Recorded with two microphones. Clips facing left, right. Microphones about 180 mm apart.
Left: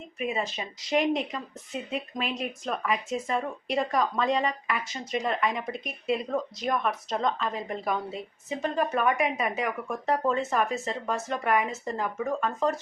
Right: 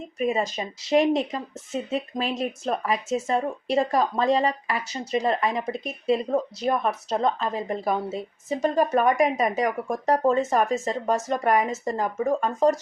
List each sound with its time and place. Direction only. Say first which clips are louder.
0.2 s speech: right 6 dB; 40° right (ahead or behind)